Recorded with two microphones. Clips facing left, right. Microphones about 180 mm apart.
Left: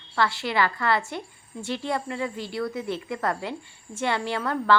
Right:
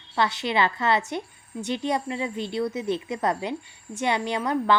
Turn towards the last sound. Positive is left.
turn(degrees=-15)  # may be behind; listen again after turning